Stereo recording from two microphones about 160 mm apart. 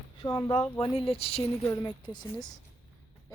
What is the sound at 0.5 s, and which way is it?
Speech, 40° left (ahead or behind).